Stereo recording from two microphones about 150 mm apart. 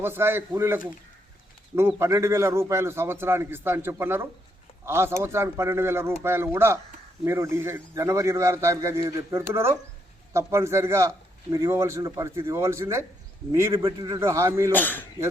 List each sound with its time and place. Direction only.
0.0 s a man's voice: 15° right (ahead or behind)
2.0 s a man's voice: 20° right (ahead or behind)
14.7 s speech: 10° left (ahead or behind)